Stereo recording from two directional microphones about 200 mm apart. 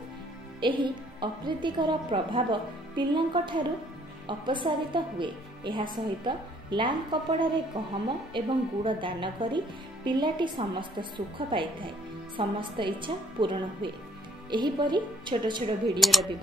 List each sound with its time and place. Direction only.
0.6 s a woman's voice: 25° right (ahead or behind)
16.0 s speech: centre (ahead or behind)